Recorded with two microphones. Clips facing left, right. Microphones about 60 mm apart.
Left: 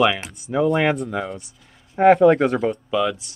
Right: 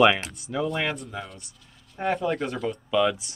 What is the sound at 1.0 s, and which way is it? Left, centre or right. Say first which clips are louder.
Speech: left 10 dB; left.